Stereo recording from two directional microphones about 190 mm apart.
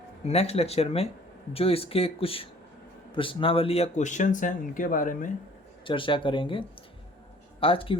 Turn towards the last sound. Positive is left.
turn(degrees=30)  # may be behind; listen again after turning